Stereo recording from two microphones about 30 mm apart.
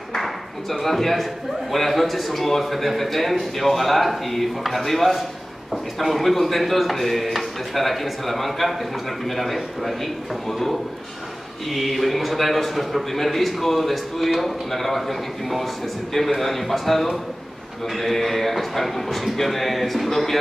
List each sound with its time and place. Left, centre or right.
0.1 s a sound: centre
1.7 s a man's voice: centre
11.7 s a man's voice: centre